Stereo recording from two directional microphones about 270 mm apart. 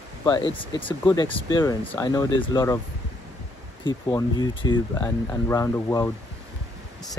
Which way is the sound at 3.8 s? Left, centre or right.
Centre.